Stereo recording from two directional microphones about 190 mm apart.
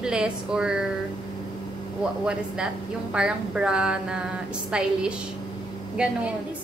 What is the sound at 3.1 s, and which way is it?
A woman's voice, 5° right (ahead or behind).